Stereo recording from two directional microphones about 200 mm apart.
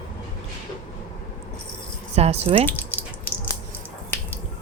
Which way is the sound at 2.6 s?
10° left (ahead or behind).